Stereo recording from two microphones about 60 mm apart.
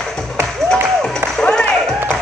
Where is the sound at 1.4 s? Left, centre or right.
Centre.